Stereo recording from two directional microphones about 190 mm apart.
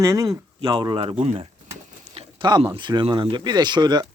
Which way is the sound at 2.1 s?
30° right (ahead or behind).